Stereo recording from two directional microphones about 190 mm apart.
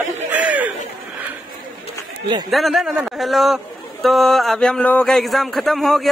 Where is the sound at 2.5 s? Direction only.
Centre (ahead or behind).